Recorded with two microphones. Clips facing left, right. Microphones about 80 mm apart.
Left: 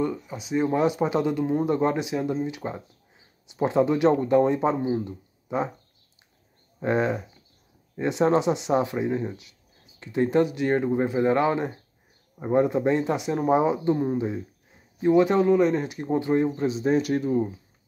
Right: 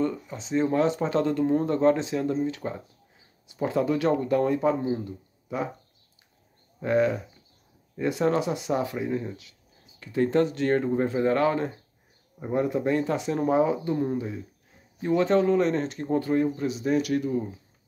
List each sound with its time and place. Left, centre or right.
0.0 s speech: centre
6.8 s speech: left